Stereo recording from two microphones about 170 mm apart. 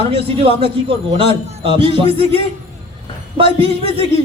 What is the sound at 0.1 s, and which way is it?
A man's voice, 35° right (ahead or behind).